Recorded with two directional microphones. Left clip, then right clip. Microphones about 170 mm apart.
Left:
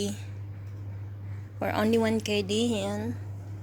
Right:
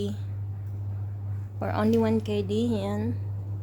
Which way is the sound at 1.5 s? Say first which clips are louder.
Even; 5° left (ahead or behind).